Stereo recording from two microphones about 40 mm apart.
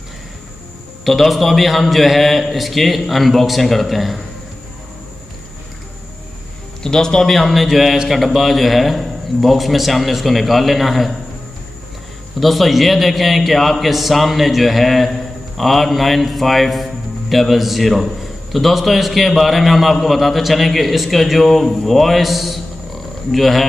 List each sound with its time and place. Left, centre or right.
1.0 s a man's voice: centre
6.8 s speech: centre
7.2 s a man's voice: centre
12.4 s a man's voice: centre